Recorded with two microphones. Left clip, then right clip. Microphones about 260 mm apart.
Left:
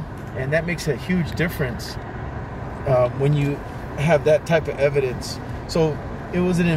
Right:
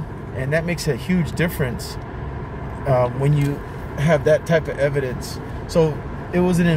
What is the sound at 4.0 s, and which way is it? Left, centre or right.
Speech, centre.